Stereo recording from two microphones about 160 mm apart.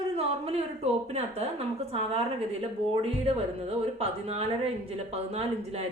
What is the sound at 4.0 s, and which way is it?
Speech, 40° right (ahead or behind).